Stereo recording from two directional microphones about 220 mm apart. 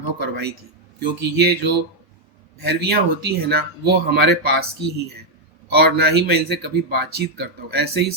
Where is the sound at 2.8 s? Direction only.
45° right (ahead or behind).